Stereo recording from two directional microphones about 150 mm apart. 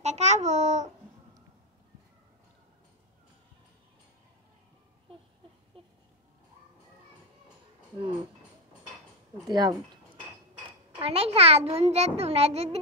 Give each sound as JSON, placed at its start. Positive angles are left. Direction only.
{"t": 0.0, "sound": "a child's voice", "side_deg": -50}
{"t": 9.5, "sound": "speech", "side_deg": -25}
{"t": 11.0, "sound": "a child's voice", "side_deg": -40}